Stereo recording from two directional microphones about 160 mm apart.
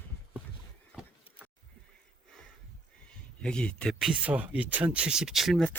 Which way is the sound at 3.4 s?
5° left (ahead or behind).